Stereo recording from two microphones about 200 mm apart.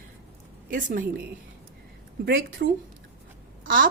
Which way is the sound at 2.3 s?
70° right (ahead or behind).